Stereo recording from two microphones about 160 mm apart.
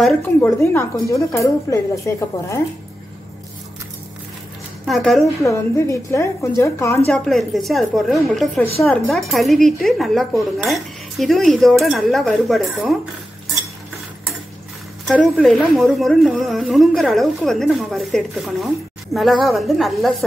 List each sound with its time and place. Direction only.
0.0 s speech: 15° left (ahead or behind)
4.8 s speech: centre (ahead or behind)
5.2 s a woman's voice: 20° left (ahead or behind)
7.1 s speech: centre (ahead or behind)
15.0 s speech: 5° left (ahead or behind)